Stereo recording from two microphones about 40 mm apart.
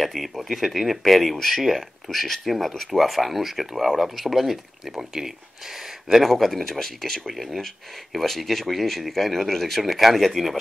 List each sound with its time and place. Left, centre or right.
0.0 s speech: centre
6.2 s speech: centre